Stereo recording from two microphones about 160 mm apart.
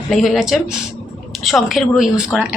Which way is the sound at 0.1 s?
Centre (ahead or behind).